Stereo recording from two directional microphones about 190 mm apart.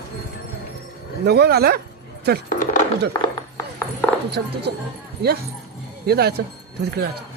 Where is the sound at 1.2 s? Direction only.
55° right (ahead or behind).